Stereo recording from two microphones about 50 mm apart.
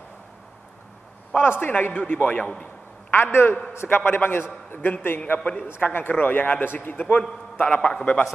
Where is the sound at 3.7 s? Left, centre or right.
Left.